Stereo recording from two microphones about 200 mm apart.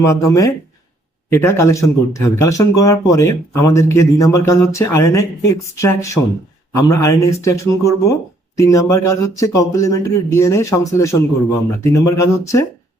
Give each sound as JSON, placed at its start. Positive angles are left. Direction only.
{"t": 0.0, "sound": "speech", "side_deg": 15}